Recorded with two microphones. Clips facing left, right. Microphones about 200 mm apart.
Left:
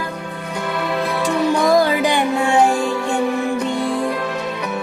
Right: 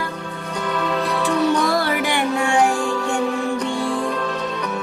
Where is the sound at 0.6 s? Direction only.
10° left (ahead or behind).